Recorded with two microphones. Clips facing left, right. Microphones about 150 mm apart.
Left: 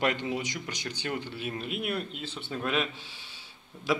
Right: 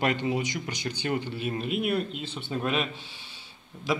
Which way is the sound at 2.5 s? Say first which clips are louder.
Right 4 dB; 15° right (ahead or behind).